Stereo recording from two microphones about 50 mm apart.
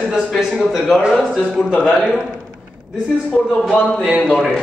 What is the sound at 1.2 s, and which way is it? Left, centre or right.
Speech, right.